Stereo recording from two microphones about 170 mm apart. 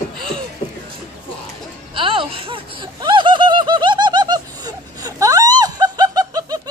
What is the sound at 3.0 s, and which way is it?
Laughter, 25° right (ahead or behind).